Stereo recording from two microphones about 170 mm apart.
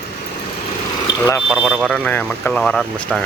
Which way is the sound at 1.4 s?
5° right (ahead or behind).